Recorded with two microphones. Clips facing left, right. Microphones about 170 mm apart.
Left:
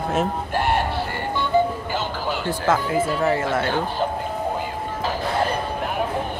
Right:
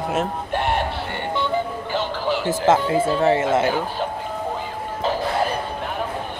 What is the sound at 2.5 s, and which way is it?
Speech, 25° right (ahead or behind).